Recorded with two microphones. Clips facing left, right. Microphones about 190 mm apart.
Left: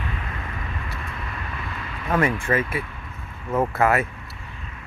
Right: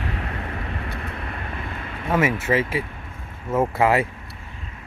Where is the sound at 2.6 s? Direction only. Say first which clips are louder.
Right 2 dB; 90° right.